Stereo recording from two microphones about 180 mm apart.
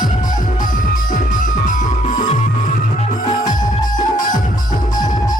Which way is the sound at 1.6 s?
45° left (ahead or behind).